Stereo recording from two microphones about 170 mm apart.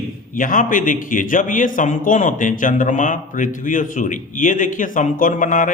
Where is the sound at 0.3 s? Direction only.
50° left (ahead or behind).